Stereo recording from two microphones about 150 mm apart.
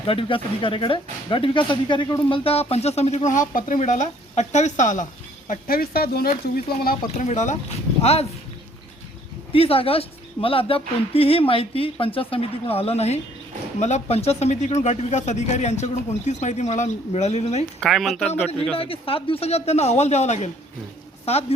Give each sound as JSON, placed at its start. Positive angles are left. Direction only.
{"t": 0.1, "sound": "speech", "side_deg": 35}
{"t": 2.4, "sound": "speech", "side_deg": 40}
{"t": 3.2, "sound": "speech", "side_deg": 60}
{"t": 5.5, "sound": "speech", "side_deg": 75}
{"t": 6.4, "sound": "speech", "side_deg": 80}
{"t": 7.3, "sound": "speech", "side_deg": 50}
{"t": 9.5, "sound": "speech", "side_deg": 40}
{"t": 17.7, "sound": "speech", "side_deg": 0}
{"t": 18.8, "sound": "speech", "side_deg": 40}